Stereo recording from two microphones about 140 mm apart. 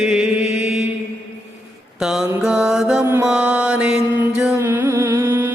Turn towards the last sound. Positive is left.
turn(degrees=-15)  # may be behind; listen again after turning